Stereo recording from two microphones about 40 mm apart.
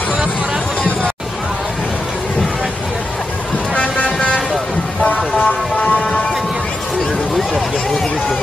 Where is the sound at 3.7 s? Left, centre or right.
Left.